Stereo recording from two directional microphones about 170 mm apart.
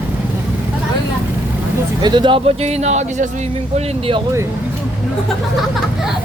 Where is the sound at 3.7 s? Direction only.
30° right (ahead or behind).